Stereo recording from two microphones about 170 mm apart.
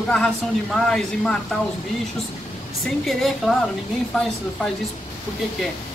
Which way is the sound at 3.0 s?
Centre (ahead or behind).